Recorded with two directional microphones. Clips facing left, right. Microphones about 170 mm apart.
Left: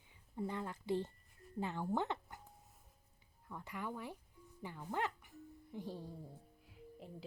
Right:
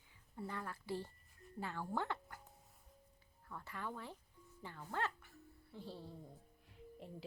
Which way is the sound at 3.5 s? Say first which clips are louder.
Left 2 dB; 15° left (ahead or behind).